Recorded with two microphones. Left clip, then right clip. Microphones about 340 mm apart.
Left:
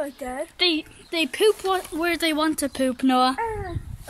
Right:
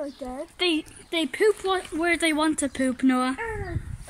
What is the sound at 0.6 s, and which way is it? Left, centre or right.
Speech, centre.